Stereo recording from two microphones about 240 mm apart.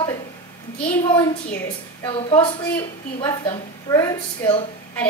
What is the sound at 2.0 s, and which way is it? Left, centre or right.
A woman's voice, left.